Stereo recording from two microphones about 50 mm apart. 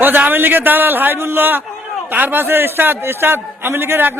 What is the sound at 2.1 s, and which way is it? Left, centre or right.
A man's voice, right.